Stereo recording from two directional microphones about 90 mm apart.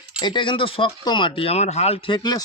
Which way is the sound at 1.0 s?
60° left (ahead or behind).